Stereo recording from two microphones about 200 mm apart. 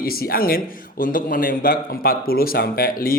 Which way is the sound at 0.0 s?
50° left (ahead or behind).